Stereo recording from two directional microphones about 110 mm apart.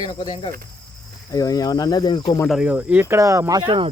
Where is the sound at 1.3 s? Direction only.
35° left (ahead or behind).